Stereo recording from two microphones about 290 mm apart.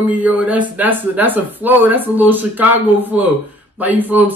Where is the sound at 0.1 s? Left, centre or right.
Centre.